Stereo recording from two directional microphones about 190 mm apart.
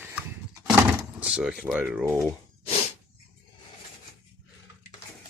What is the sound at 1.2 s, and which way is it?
Speech, 5° right (ahead or behind).